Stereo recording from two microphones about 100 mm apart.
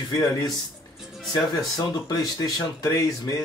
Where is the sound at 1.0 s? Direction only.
Centre (ahead or behind).